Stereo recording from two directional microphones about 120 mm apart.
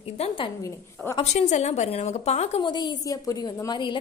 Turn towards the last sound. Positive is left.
turn(degrees=35)  # may be behind; listen again after turning